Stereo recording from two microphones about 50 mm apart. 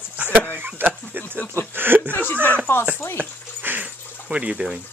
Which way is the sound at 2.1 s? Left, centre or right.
Left.